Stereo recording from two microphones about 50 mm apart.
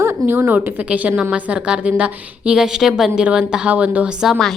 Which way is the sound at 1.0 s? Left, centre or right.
Right.